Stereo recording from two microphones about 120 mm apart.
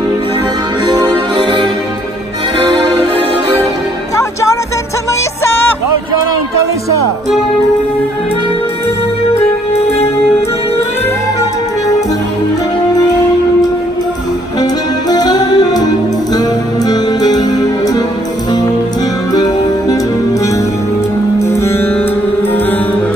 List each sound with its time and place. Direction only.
1.3 s music: 40° right (ahead or behind)
9.3 s music: 60° left (ahead or behind)
14.6 s music: 35° left (ahead or behind)
21.4 s music: 25° left (ahead or behind)